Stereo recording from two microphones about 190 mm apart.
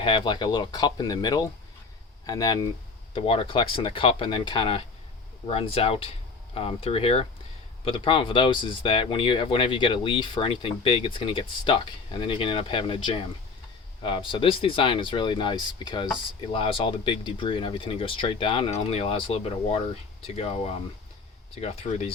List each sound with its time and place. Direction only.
0.0 s speech: 25° left (ahead or behind)